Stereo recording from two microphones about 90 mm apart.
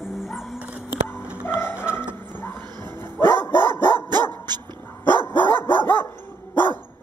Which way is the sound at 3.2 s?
25° left (ahead or behind).